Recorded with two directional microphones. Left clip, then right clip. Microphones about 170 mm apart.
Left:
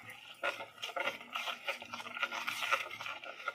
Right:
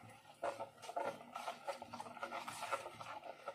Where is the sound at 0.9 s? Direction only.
Centre (ahead or behind).